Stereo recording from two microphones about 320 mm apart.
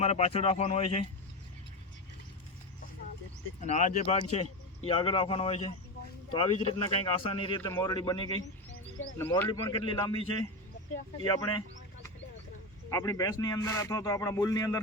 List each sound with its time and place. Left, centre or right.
0.0 s speech: centre
3.6 s speech: left
12.9 s speech: centre